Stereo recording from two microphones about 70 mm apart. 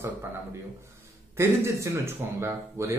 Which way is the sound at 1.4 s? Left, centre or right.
Right.